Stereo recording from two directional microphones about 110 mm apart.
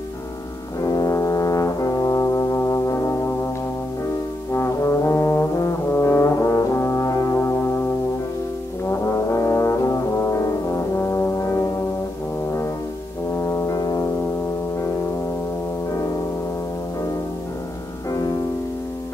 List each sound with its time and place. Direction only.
0.7 s brass instrument: 35° left (ahead or behind)
4.5 s brass instrument: 25° left (ahead or behind)
9.3 s brass instrument: 30° left (ahead or behind)
13.5 s brass instrument: 30° left (ahead or behind)